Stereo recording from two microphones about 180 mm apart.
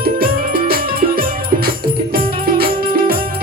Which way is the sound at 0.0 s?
55° right (ahead or behind).